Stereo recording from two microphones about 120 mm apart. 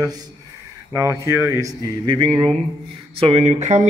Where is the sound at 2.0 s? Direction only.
45° right (ahead or behind).